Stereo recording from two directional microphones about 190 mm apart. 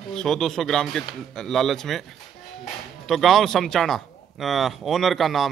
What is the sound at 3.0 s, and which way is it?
Speech, centre (ahead or behind).